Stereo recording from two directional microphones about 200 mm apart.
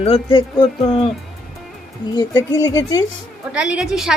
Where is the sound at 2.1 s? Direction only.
20° left (ahead or behind).